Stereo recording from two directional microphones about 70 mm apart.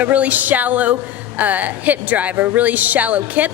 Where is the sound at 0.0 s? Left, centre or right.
Right.